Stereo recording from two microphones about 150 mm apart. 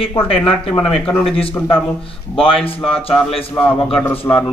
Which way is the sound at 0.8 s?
10° left (ahead or behind).